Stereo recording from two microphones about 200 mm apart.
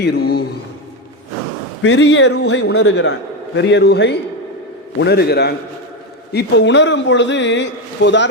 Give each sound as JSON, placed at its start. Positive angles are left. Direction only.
{"t": 0.0, "sound": "a man's voice", "side_deg": 55}
{"t": 1.8, "sound": "a man's voice", "side_deg": 65}